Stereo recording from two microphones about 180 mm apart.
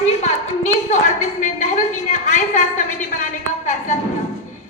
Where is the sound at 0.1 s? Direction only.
40° left (ahead or behind).